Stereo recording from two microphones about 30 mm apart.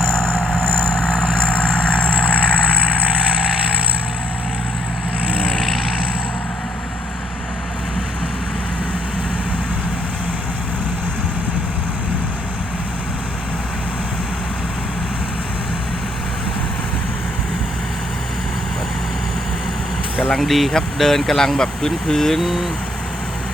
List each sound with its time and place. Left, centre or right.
0.3 s vehicle: left
20.4 s speech: centre
22.4 s speech: centre